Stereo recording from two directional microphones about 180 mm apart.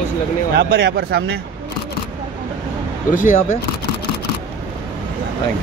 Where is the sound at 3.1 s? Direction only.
50° left (ahead or behind).